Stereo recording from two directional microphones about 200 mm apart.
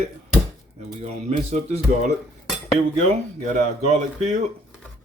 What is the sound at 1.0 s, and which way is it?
Speech, 35° right (ahead or behind).